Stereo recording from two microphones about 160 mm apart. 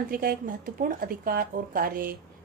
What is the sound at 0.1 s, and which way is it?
Speech, 60° right (ahead or behind).